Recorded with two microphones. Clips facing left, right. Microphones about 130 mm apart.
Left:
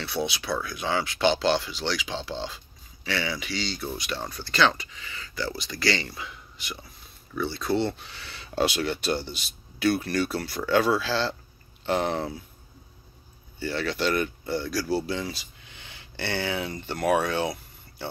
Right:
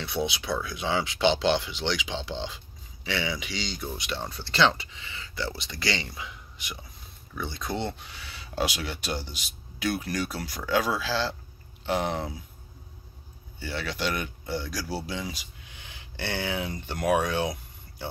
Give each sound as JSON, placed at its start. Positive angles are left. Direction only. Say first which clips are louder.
{"t": 0.0, "sound": "speech", "louder": "even", "side_deg": -20}
{"t": 13.6, "sound": "speech", "louder": "left 4 dB", "side_deg": -10}